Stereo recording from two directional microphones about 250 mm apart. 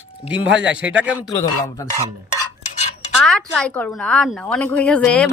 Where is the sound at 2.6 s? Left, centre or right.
Left.